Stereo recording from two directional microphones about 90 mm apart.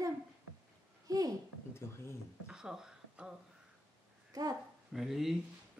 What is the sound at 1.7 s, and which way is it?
Speech, 30° left (ahead or behind).